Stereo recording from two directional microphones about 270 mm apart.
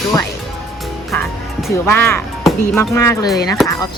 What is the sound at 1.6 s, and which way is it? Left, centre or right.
Speech, centre.